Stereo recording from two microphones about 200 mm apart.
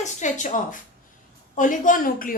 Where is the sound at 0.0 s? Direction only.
40° left (ahead or behind).